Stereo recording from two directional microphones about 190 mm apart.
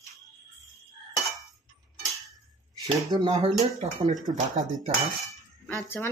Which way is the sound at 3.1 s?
25° right (ahead or behind).